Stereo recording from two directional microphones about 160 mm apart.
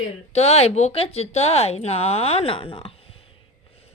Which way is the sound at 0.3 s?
40° left (ahead or behind).